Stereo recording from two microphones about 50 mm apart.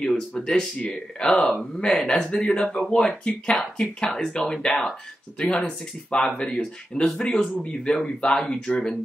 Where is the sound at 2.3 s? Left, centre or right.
Left.